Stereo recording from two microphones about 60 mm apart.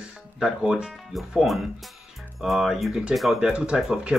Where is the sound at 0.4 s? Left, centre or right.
Centre.